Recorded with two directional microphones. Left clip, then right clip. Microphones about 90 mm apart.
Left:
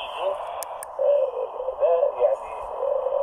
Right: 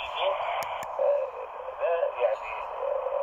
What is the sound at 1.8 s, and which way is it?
Radio, 40° left (ahead or behind).